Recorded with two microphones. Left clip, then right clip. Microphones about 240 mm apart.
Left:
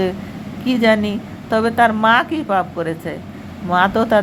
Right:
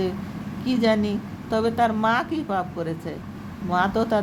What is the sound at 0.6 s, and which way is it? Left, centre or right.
A woman's voice, centre.